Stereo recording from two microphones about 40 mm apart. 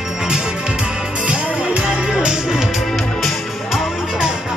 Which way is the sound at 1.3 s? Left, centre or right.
Right.